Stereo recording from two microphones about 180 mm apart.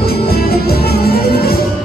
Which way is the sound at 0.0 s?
60° left (ahead or behind).